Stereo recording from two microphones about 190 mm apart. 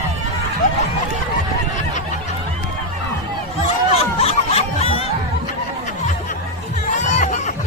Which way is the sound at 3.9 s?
30° left (ahead or behind).